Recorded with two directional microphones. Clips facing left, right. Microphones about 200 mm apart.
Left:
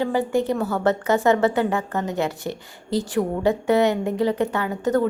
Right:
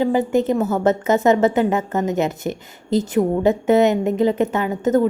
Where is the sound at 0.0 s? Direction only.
20° right (ahead or behind).